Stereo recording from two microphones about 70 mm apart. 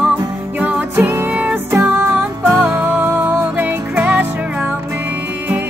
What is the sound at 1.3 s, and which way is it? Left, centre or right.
Music, right.